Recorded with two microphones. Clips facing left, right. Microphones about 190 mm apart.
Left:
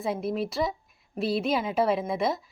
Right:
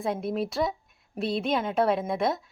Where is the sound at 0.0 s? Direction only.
Centre (ahead or behind).